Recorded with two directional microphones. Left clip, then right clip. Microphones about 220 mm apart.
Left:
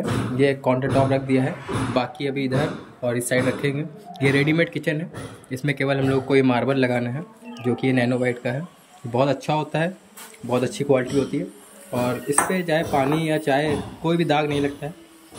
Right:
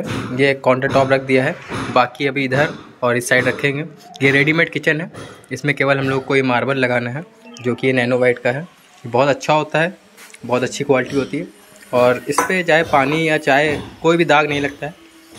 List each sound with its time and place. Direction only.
0.4 s speech: 5° left (ahead or behind)